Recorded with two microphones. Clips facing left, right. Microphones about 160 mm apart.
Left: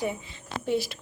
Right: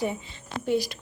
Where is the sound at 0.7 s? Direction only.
Centre (ahead or behind).